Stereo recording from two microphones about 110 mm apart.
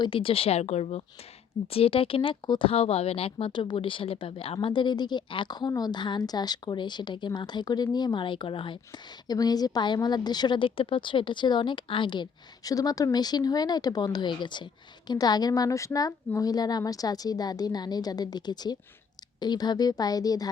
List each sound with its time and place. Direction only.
0.0 s speech: 55° left (ahead or behind); by 1.0 s 75° left (ahead or behind)
1.6 s speech: 60° left (ahead or behind)
9.2 s a woman's voice: 35° left (ahead or behind)